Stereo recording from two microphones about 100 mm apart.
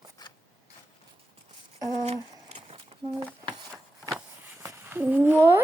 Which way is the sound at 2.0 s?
85° right.